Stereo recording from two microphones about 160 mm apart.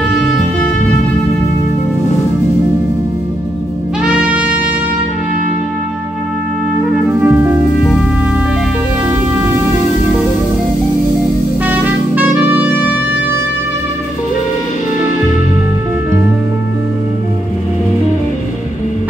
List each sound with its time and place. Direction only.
4.0 s trumpet: 10° right (ahead or behind)
7.2 s music: 10° right (ahead or behind)
11.6 s music: 10° right (ahead or behind)